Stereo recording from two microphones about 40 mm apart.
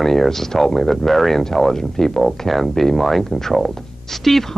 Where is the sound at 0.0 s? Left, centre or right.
Centre.